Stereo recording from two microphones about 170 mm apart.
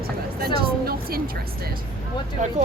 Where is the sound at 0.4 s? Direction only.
60° right (ahead or behind).